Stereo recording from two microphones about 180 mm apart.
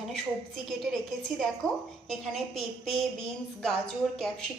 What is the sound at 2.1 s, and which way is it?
Speech, centre (ahead or behind).